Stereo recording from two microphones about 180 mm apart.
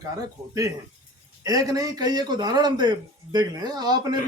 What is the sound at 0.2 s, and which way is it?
A man's voice, 20° right (ahead or behind).